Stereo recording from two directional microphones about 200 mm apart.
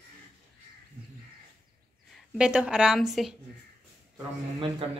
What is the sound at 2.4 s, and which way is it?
Speech, 5° right (ahead or behind).